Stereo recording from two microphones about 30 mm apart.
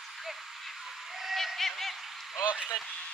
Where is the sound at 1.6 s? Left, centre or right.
Centre.